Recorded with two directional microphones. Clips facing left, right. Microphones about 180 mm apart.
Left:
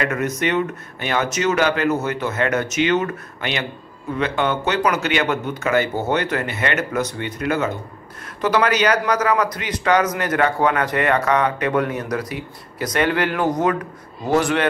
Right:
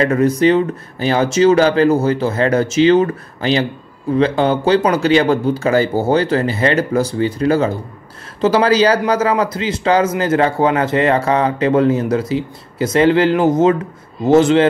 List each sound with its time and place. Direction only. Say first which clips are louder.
0.0 s speech: right 9 dB; 30° right (ahead or behind)